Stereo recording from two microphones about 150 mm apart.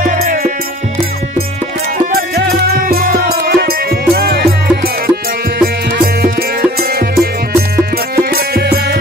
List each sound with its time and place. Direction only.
0.0 s music: 65° right (ahead or behind)
2.1 s music: 90° right
6.8 s music: 85° right